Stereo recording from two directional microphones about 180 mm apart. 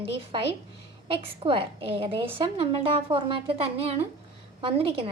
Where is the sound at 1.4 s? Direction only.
30° right (ahead or behind).